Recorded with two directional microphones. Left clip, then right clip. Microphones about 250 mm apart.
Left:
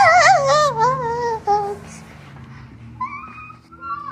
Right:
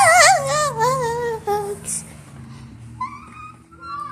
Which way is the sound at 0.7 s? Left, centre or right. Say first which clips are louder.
Left 1 dB; centre.